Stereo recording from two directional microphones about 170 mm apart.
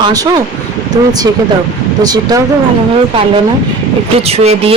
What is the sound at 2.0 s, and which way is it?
Speech, 25° right (ahead or behind).